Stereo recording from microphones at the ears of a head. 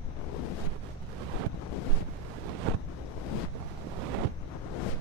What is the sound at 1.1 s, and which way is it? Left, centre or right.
Wind noise, right.